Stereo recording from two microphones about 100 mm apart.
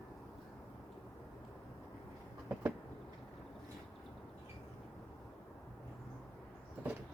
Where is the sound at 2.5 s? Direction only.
20° right (ahead or behind).